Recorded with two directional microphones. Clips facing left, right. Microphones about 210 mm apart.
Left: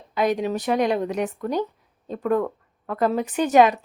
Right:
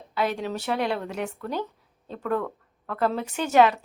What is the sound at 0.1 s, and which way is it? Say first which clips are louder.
A woman's voice: left 5 dB; 15° left (ahead or behind).